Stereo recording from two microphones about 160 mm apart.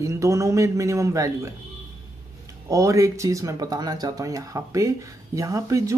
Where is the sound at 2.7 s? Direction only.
20° right (ahead or behind).